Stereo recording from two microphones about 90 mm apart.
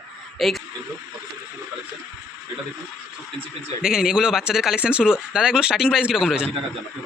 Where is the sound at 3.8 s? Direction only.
5° right (ahead or behind).